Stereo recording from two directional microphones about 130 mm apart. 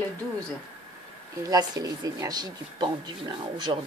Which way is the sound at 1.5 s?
30° right (ahead or behind).